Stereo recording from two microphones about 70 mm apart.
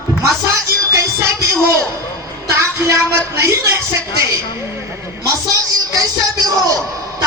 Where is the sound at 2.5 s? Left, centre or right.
Right.